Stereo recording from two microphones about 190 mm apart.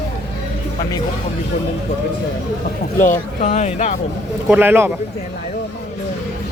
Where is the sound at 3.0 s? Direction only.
40° left (ahead or behind).